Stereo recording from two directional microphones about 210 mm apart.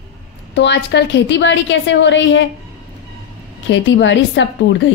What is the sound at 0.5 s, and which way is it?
A woman's voice, 55° left (ahead or behind).